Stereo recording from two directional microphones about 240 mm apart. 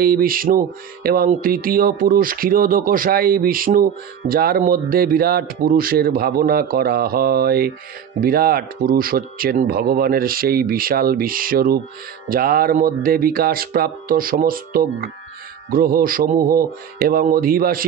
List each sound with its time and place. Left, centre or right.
0.0 s music: right